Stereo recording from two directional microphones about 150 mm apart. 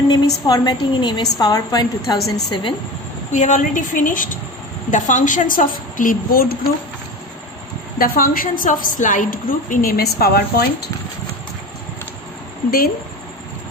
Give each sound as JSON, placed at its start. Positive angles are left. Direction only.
{"t": 0.4, "sound": "a woman's voice", "side_deg": 25}
{"t": 3.3, "sound": "a woman's voice", "side_deg": 55}
{"t": 7.9, "sound": "a woman's voice", "side_deg": 75}